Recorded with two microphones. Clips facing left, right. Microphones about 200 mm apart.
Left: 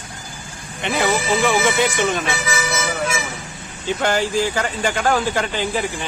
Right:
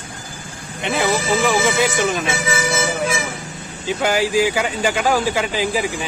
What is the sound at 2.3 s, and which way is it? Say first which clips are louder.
Speech: right 2 dB; 30° right (ahead or behind).